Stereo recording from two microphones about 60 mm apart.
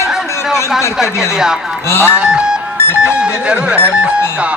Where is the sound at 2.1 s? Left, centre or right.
Centre.